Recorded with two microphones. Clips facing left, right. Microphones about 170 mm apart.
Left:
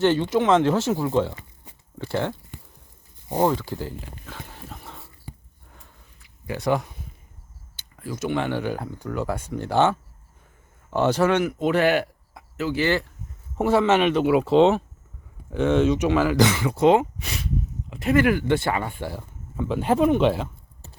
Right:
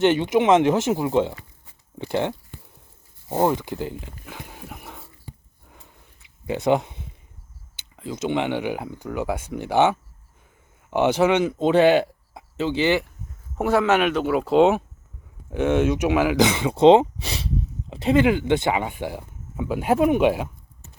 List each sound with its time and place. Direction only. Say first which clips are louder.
0.0 s speech: right 2 dB; 20° right (ahead or behind)
3.4 s speech: right 1 dB; 15° right (ahead or behind)
4.3 s dog: right 3 dB; 10° right (ahead or behind)
6.1 s a sound: right 4 dB; 20° right (ahead or behind)
7.8 s speech: right 1 dB; 20° right (ahead or behind)
13.6 s speech: even; 5° right (ahead or behind)
20.8 s clip-clop: left 3 dB; 30° left (ahead or behind)